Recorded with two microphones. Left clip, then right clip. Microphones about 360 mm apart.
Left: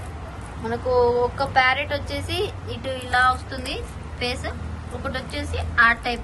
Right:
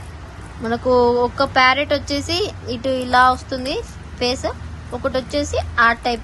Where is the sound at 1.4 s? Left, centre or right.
Centre.